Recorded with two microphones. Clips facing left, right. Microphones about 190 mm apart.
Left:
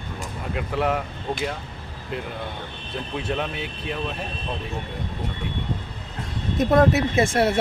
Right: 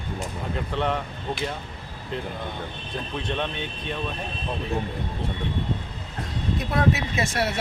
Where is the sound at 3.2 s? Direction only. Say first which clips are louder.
Left 2 dB; 5° left (ahead or behind).